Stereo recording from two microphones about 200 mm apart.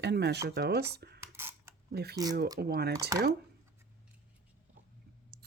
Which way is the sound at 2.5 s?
50° right (ahead or behind).